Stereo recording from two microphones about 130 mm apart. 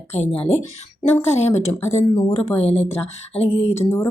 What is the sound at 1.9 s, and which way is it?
Speech, 55° left (ahead or behind).